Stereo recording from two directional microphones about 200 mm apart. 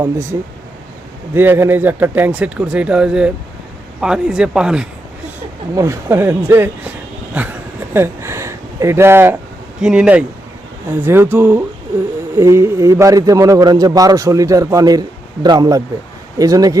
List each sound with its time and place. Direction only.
0.0 s a man's voice: 15° right (ahead or behind)